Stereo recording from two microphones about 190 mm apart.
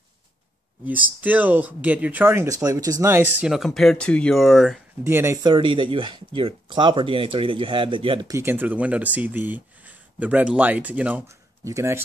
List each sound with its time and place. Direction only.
1.2 s speech: 10° right (ahead or behind)
5.0 s speech: 15° right (ahead or behind)